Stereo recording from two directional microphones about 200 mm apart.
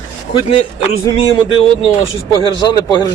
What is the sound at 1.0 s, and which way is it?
A man's voice, 15° left (ahead or behind).